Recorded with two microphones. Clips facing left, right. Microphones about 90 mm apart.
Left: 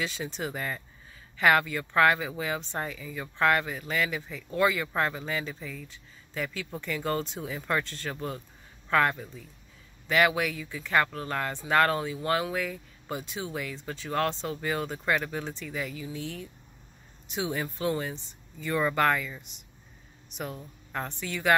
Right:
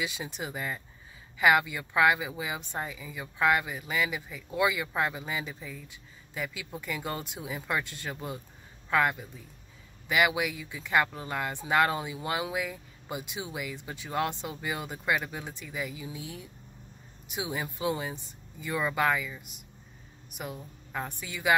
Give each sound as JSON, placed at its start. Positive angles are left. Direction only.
{"t": 0.0, "sound": "speech", "side_deg": -15}